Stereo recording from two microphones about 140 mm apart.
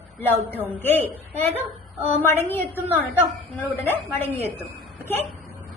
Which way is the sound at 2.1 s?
15° left (ahead or behind).